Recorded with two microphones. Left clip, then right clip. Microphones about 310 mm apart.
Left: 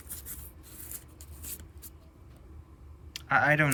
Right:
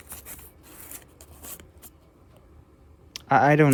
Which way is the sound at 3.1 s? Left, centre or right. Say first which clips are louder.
Right 5 dB; centre.